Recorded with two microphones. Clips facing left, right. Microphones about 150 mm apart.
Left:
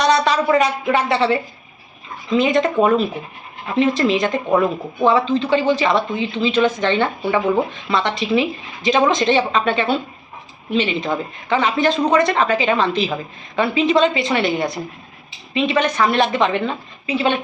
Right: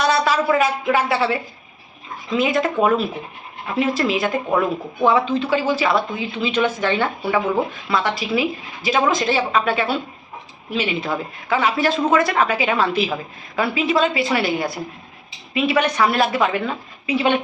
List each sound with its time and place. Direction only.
0.0 s a woman's voice: 5° right (ahead or behind)